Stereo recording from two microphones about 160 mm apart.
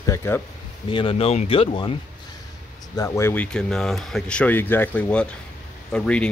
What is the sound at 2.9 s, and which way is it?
Speech, 20° left (ahead or behind).